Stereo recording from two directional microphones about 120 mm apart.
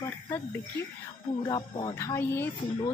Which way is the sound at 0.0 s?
20° left (ahead or behind).